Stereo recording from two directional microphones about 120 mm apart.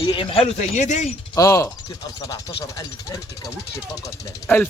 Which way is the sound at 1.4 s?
25° left (ahead or behind).